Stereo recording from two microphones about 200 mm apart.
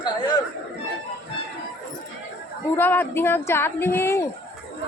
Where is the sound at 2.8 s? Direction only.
10° left (ahead or behind).